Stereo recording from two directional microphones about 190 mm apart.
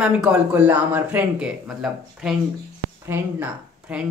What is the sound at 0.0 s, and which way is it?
Speech, 5° right (ahead or behind).